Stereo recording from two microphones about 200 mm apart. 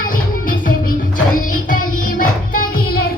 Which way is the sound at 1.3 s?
40° left (ahead or behind).